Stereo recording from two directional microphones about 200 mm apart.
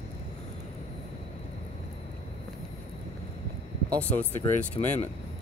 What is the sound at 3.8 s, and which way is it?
Speech, 5° left (ahead or behind).